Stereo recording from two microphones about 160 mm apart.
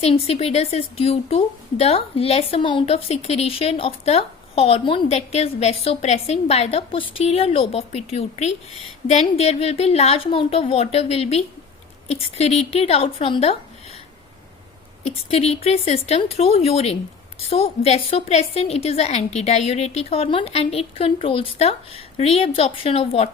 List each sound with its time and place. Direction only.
0.0 s a woman's voice: 40° left (ahead or behind)
15.0 s a woman's voice: 40° left (ahead or behind)